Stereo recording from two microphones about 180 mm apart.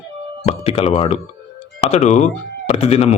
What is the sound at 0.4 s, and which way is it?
Speech, 35° left (ahead or behind).